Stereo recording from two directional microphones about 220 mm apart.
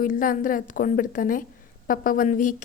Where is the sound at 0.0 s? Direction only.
40° left (ahead or behind).